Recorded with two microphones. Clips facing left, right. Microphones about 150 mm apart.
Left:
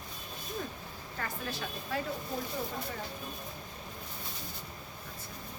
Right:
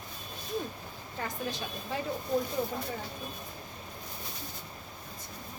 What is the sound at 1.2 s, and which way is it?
Speech, 20° right (ahead or behind).